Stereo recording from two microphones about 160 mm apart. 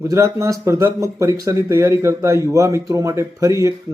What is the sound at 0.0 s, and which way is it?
Speech, 15° right (ahead or behind).